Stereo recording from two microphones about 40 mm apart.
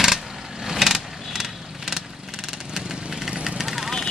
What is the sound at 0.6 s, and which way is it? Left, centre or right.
Vehicle, centre.